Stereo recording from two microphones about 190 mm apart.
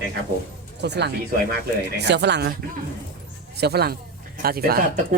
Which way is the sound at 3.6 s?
60° right (ahead or behind).